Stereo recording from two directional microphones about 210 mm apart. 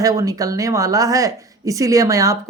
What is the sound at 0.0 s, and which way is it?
Speech, 15° right (ahead or behind).